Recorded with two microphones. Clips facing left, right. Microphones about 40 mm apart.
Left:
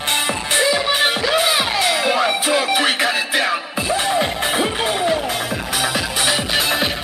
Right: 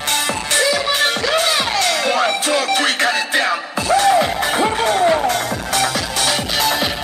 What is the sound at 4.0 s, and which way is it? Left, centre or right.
Music, centre.